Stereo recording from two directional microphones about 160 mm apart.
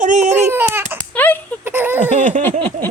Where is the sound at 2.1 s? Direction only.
50° right (ahead or behind).